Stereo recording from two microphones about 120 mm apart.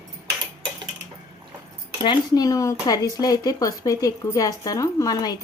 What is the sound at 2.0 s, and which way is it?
Speech, 30° left (ahead or behind).